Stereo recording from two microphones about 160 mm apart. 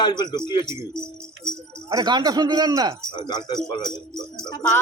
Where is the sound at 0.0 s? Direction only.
25° left (ahead or behind).